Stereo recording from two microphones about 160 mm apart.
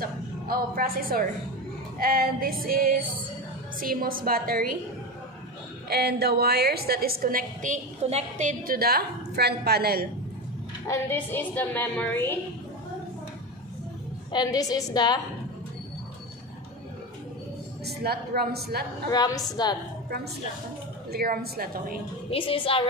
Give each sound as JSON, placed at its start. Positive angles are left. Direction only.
{"t": 0.0, "sound": "music", "side_deg": -65}
{"t": 5.9, "sound": "a woman's voice", "side_deg": -80}
{"t": 8.0, "sound": "a woman's voice", "side_deg": -45}
{"t": 10.9, "sound": "a woman's voice", "side_deg": 15}
{"t": 14.3, "sound": "a woman's voice", "side_deg": 25}
{"t": 17.8, "sound": "a woman's voice", "side_deg": -80}
{"t": 19.0, "sound": "a woman's voice", "side_deg": 20}
{"t": 21.1, "sound": "a woman's voice", "side_deg": -75}
{"t": 22.3, "sound": "a woman's voice", "side_deg": 35}